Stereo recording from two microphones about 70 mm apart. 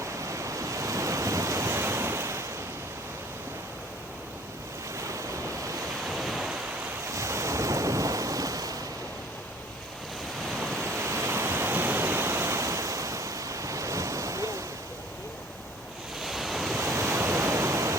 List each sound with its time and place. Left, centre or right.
0.0 s waves: right
4.9 s waves: right
6.1 s waves: centre
7.1 s ocean: right
10.6 s waves: centre
10.8 s waterfall: right
16.2 s waves: centre
16.8 s waves: right